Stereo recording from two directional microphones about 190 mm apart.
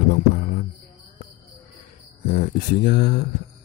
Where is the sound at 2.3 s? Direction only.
50° left (ahead or behind).